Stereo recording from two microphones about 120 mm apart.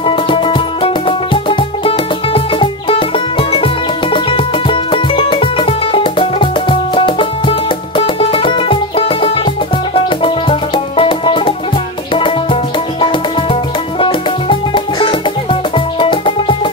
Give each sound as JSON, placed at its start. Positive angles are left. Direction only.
{"t": 0.0, "sound": "music", "side_deg": 45}